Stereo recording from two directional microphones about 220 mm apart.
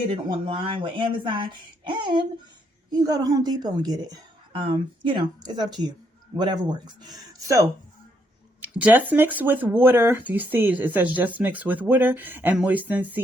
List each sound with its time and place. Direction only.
0.1 s speech: 25° right (ahead or behind); by 13.2 s 10° right (ahead or behind)